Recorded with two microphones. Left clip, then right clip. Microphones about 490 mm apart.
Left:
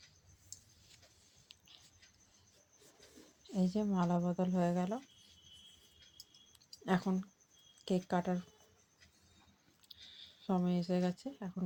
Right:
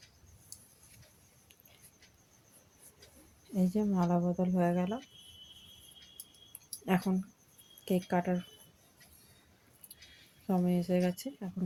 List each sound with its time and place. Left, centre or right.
3.5 s speech: right
6.7 s a sound: right
7.9 s speech: right
10.4 s speech: right